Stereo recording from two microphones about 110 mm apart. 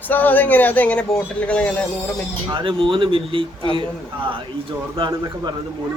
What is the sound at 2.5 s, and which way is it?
A man's voice, 50° right (ahead or behind).